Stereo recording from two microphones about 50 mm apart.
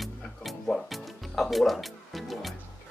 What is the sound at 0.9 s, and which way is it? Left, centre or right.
Music, centre.